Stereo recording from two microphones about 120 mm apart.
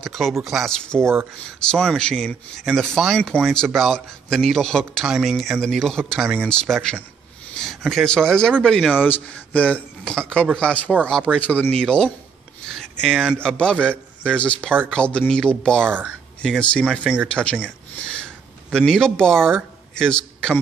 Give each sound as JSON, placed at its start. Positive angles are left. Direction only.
{"t": 0.0, "sound": "speech", "side_deg": 0}
{"t": 15.8, "sound": "speech", "side_deg": -15}
{"t": 16.4, "sound": "speech", "side_deg": 5}